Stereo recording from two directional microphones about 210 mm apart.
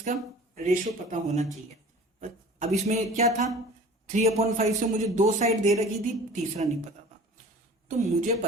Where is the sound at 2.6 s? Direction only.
30° right (ahead or behind).